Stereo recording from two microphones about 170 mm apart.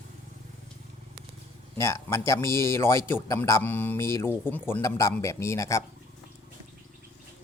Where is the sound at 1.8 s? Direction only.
15° left (ahead or behind).